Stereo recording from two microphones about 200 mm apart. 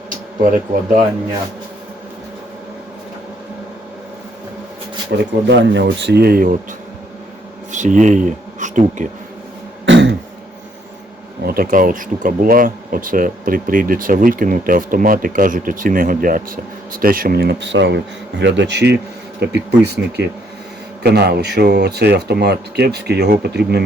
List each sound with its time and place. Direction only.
5.1 s speech: 60° right (ahead or behind); by 6.6 s 45° right (ahead or behind)
7.7 s speech: 40° right (ahead or behind)
9.8 s throat clearing: 65° right (ahead or behind)
11.4 s speech: 45° right (ahead or behind)